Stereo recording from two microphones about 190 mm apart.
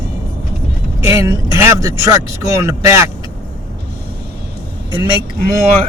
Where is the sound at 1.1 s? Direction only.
15° right (ahead or behind).